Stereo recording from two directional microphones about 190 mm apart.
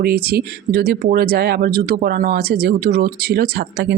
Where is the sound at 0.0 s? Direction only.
55° right (ahead or behind).